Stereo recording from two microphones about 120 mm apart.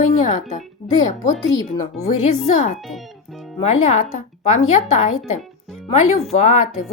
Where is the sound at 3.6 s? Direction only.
70° left (ahead or behind).